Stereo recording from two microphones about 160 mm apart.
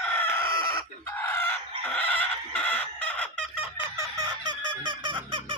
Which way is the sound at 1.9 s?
10° left (ahead or behind).